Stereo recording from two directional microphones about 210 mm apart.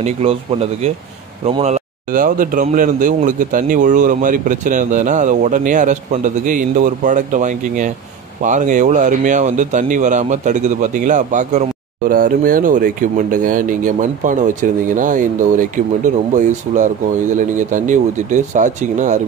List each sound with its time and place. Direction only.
0.0 s speech: 30° right (ahead or behind)